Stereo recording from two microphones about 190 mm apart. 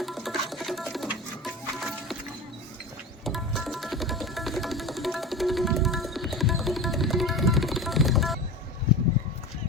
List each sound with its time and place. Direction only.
0.0 s music: centre (ahead or behind)
3.2 s music: centre (ahead or behind)